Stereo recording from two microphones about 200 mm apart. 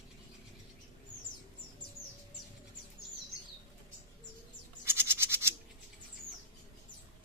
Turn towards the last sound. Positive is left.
turn(degrees=-10)  # may be behind; listen again after turning